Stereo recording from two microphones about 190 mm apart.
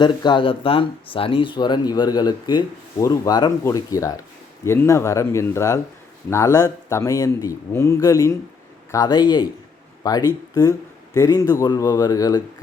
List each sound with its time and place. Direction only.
0.0 s speech: 25° left (ahead or behind)